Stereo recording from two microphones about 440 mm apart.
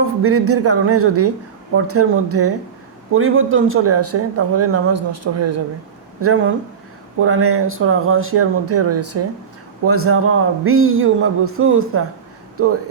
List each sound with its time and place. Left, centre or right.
0.2 s speech: right